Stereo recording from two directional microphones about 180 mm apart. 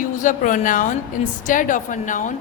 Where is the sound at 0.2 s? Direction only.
45° left (ahead or behind).